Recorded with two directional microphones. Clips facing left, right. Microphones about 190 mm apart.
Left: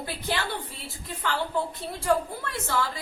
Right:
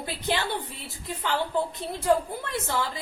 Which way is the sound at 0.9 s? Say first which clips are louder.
Right 2 dB; 20° right (ahead or behind).